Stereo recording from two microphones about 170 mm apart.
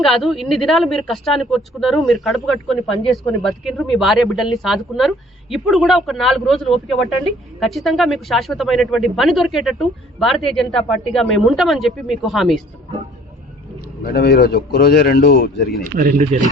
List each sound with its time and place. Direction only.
0.0 s speech: centre (ahead or behind)
14.0 s a man's voice: 65° left (ahead or behind)
15.8 s speech: 50° right (ahead or behind)